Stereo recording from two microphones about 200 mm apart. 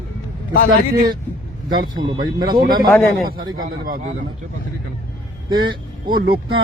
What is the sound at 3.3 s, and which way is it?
Speech, 45° right (ahead or behind).